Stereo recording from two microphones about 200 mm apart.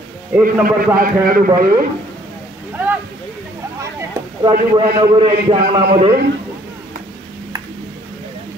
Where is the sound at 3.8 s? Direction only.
15° right (ahead or behind).